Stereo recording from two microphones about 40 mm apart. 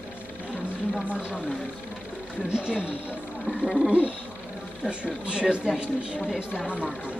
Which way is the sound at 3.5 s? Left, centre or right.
Centre.